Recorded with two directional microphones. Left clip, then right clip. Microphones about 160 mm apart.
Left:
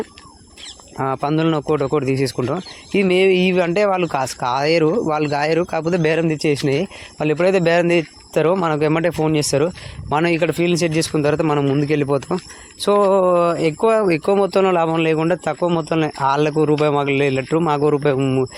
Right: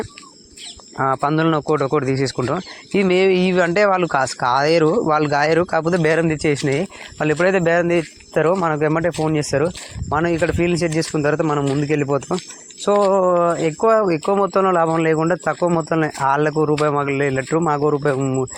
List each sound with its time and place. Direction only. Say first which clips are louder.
0.9 s a man's voice: right 2 dB; 20° left (ahead or behind)
10.5 s a man's voice: left 1 dB; 20° left (ahead or behind)
11.9 s a man's voice: left 1 dB; 10° left (ahead or behind)
16.5 s a man's voice: left 1 dB; 35° left (ahead or behind)